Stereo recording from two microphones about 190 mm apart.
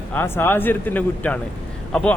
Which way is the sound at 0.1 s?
10° left (ahead or behind).